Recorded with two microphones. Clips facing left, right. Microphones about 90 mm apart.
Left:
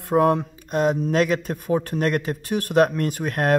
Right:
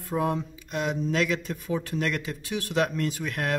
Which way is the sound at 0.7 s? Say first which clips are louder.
Left 7 dB; 45° left (ahead or behind).